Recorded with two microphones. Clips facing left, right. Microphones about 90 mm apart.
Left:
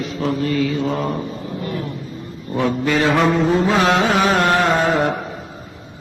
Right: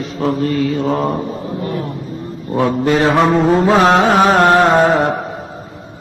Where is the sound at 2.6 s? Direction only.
40° right (ahead or behind).